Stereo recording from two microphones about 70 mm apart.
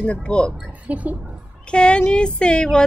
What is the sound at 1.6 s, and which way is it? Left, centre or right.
Speech, centre.